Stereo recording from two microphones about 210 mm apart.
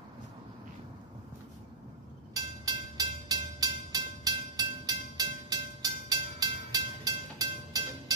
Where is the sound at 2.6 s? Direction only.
15° right (ahead or behind).